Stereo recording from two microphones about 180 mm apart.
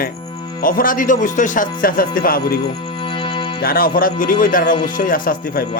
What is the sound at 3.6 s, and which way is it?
A man's voice, 55° left (ahead or behind).